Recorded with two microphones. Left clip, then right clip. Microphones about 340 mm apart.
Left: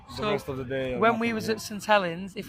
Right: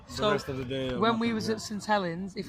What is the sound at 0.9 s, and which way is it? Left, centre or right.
Speech, left.